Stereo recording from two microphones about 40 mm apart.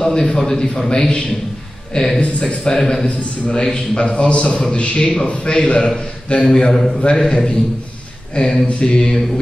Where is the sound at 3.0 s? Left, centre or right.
Left.